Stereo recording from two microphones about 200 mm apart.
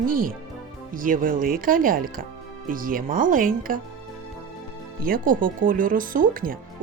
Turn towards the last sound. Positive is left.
turn(degrees=-45)  # may be behind; listen again after turning